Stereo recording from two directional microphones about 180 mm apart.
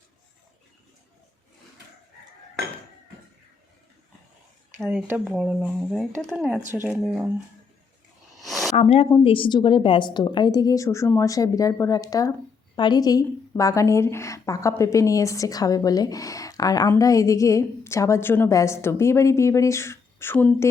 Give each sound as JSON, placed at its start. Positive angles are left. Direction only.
{"t": 4.8, "sound": "speech", "side_deg": 0}
{"t": 5.0, "sound": "speech", "side_deg": -10}
{"t": 8.4, "sound": "a sound", "side_deg": 0}
{"t": 8.7, "sound": "a woman's voice", "side_deg": 35}